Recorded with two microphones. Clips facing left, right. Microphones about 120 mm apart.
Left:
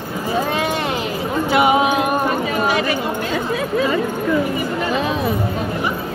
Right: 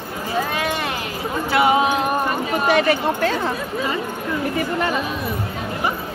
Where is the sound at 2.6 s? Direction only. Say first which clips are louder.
Right 2 dB; 65° right (ahead or behind).